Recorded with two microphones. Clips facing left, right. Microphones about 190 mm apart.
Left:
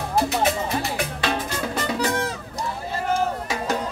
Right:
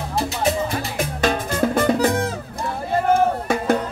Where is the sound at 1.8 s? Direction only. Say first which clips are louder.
Right 6 dB; 55° right (ahead or behind).